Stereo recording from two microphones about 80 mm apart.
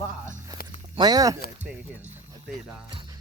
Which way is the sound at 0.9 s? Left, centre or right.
Right.